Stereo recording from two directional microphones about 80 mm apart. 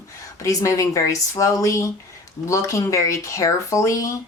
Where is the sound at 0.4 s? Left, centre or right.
Left.